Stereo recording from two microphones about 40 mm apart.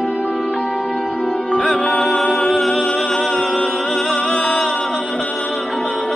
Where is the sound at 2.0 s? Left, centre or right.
Centre.